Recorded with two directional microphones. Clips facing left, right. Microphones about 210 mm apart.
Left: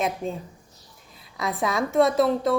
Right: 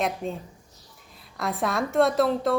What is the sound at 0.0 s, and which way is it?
A woman's voice, centre (ahead or behind).